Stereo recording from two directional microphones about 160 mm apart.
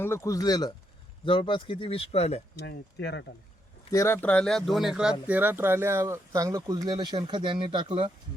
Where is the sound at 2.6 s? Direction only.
90° left.